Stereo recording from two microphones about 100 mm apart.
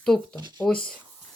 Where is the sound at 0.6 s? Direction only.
10° left (ahead or behind).